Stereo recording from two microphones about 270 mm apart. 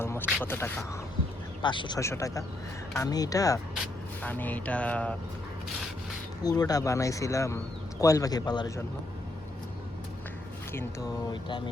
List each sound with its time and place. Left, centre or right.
0.0 s a sound: centre
0.4 s speech: centre
6.4 s speech: centre
11.3 s speech: centre